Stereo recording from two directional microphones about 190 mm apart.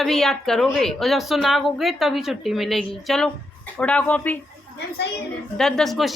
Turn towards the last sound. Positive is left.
turn(degrees=0)  # may be behind; listen again after turning